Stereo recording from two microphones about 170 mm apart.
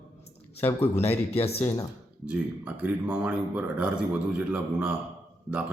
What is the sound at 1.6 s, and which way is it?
Speech, 20° left (ahead or behind).